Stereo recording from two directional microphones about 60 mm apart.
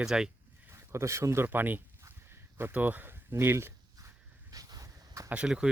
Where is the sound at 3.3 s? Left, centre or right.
Right.